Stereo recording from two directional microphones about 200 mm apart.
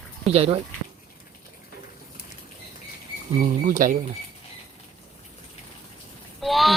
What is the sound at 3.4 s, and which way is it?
Speech, 40° right (ahead or behind).